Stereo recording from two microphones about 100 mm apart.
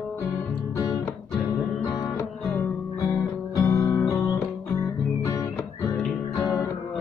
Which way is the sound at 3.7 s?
30° left (ahead or behind).